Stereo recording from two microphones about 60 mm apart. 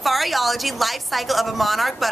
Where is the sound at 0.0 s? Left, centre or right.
Centre.